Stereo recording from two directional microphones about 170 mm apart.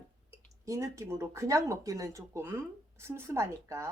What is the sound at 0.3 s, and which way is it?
Speech, 20° right (ahead or behind).